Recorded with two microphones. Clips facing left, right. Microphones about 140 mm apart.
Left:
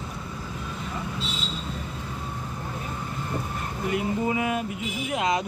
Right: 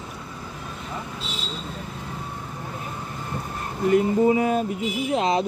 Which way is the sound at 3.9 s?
40° right (ahead or behind).